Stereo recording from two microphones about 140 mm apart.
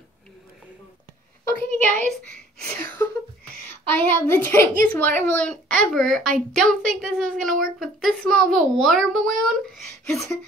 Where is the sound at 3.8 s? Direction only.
15° left (ahead or behind).